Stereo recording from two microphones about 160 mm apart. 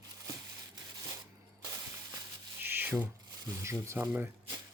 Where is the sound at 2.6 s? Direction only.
10° right (ahead or behind).